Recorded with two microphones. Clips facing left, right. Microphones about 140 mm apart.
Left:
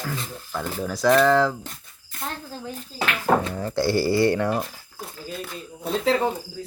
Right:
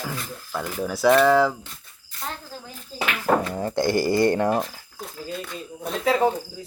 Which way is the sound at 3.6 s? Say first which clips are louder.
Right 1 dB; 20° right (ahead or behind).